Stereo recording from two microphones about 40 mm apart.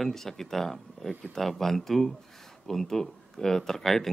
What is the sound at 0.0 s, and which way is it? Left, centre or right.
Speech, centre.